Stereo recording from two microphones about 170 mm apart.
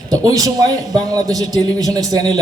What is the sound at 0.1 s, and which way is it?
A man's voice, 20° right (ahead or behind).